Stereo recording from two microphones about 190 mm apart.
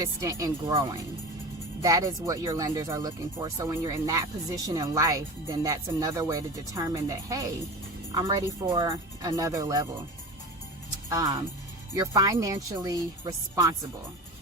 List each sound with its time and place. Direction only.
0.0 s speech: 15° right (ahead or behind)
11.1 s speech: 20° right (ahead or behind)